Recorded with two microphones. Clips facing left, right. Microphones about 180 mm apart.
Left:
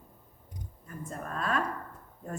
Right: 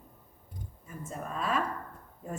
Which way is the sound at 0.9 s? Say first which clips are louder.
Even; 5° right (ahead or behind).